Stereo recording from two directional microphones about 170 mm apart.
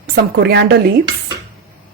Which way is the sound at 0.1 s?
70° right (ahead or behind).